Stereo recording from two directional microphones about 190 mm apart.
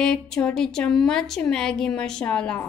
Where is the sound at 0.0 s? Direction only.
5° left (ahead or behind).